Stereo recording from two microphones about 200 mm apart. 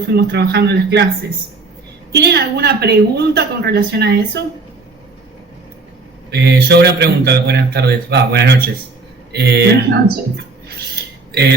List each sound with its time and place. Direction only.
0.1 s a woman's voice: 55° right (ahead or behind)
2.1 s a woman's voice: 55° right (ahead or behind)
6.3 s a woman's voice: 55° right (ahead or behind)